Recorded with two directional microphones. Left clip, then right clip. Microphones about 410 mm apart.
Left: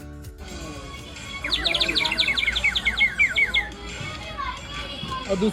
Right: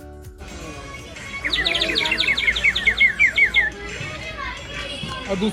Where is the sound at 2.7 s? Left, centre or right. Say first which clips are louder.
Right 4 dB; centre.